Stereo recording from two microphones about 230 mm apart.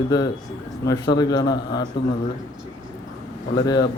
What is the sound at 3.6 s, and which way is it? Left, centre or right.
Speech, centre.